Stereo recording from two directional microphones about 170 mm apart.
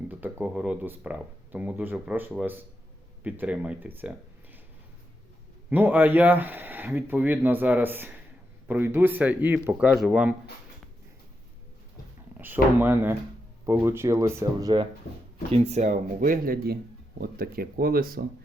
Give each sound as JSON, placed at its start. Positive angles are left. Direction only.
{"t": 0.1, "sound": "speech", "side_deg": -10}
{"t": 5.7, "sound": "speech", "side_deg": -10}
{"t": 12.4, "sound": "speech", "side_deg": -10}
{"t": 15.5, "sound": "speech", "side_deg": -40}